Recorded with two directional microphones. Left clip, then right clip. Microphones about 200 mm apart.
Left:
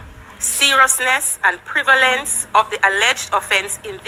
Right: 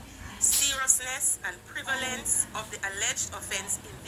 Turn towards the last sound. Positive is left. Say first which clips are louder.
# left 17 dB
turn(degrees=45)  # may be behind; listen again after turning